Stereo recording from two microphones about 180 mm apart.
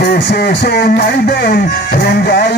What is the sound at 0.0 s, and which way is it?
Speech, 65° left (ahead or behind).